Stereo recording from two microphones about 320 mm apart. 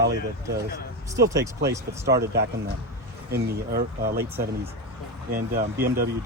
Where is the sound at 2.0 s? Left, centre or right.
Right.